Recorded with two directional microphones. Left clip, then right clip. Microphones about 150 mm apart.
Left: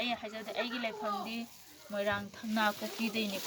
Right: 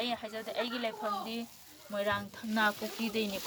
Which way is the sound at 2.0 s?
20° right (ahead or behind).